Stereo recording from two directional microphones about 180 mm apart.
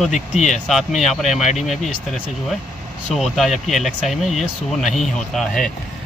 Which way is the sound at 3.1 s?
Centre (ahead or behind).